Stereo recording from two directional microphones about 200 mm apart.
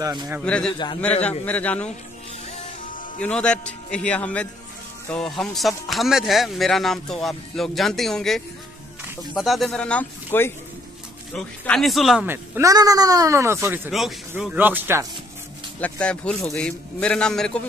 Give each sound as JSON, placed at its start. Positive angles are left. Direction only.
{"t": 0.0, "sound": "speech", "side_deg": -15}
{"t": 0.4, "sound": "a man's voice", "side_deg": 5}
{"t": 3.2, "sound": "speech", "side_deg": 5}
{"t": 13.9, "sound": "speech", "side_deg": 0}
{"t": 15.8, "sound": "speech", "side_deg": 5}